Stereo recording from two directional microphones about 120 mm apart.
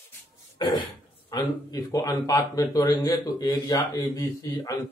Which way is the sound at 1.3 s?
40° left (ahead or behind).